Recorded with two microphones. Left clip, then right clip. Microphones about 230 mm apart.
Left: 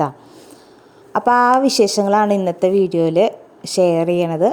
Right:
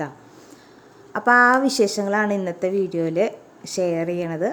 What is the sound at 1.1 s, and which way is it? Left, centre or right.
A woman's voice, centre.